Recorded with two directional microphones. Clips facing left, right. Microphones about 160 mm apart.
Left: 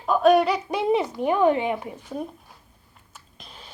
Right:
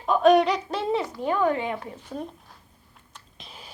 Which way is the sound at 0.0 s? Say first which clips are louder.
Even; 5° left (ahead or behind).